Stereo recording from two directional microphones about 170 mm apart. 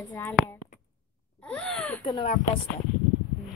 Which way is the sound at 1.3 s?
5° left (ahead or behind).